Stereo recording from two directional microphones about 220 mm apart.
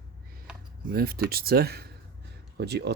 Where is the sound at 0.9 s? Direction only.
45° right (ahead or behind).